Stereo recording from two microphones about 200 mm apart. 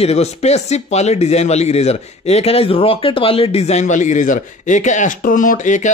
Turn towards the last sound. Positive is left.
turn(degrees=40)  # may be behind; listen again after turning